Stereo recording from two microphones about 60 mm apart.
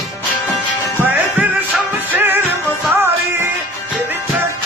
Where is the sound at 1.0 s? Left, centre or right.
Right.